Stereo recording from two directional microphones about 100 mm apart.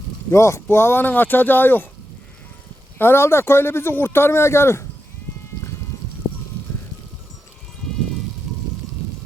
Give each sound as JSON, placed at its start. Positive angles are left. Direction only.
{"t": 0.3, "sound": "speech", "side_deg": 25}
{"t": 3.0, "sound": "speech", "side_deg": 25}